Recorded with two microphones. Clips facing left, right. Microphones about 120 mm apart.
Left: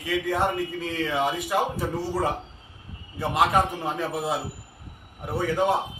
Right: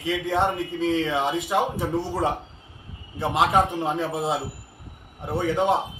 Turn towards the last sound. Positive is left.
turn(degrees=-25)  # may be behind; listen again after turning